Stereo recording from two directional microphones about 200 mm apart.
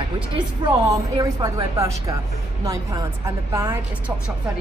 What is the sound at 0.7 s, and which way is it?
A woman's voice, 15° right (ahead or behind).